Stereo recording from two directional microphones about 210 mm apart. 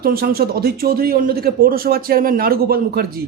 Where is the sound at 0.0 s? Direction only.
45° right (ahead or behind).